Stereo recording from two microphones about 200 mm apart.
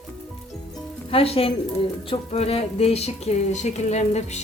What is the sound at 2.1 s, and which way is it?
Music, 30° left (ahead or behind).